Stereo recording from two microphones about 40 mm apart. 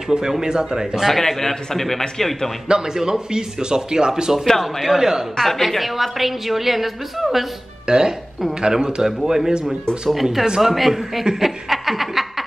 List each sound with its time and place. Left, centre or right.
0.3 s speech: centre
1.0 s a man's voice: centre
2.7 s speech: centre
4.6 s a woman's voice: centre
4.9 s speech: centre
5.3 s a woman's voice: centre
7.8 s a woman's voice: centre
11.2 s chuckle: centre